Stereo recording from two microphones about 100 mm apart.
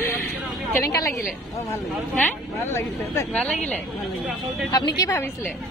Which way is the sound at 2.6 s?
25° left (ahead or behind).